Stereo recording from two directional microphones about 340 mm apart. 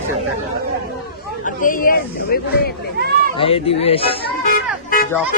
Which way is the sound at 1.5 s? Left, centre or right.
Left.